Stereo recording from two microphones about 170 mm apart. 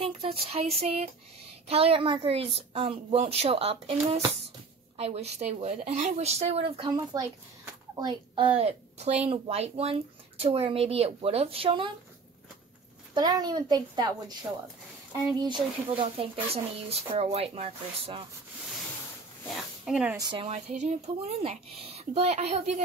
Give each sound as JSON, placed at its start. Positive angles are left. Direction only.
{"t": 0.0, "sound": "a woman's voice", "side_deg": -35}
{"t": 13.1, "sound": "a woman's voice", "side_deg": -25}
{"t": 15.3, "sound": "a woman's voice", "side_deg": -25}
{"t": 19.5, "sound": "speech", "side_deg": 0}
{"t": 20.2, "sound": "a woman's voice", "side_deg": -25}
{"t": 20.4, "sound": "a woman's voice", "side_deg": -40}